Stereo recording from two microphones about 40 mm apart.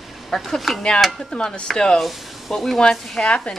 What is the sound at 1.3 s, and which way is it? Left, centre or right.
Speech, left.